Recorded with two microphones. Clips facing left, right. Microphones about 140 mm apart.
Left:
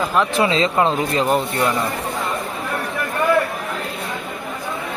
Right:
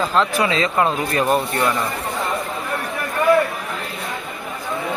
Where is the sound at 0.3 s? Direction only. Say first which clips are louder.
Left 2 dB; 25° left (ahead or behind).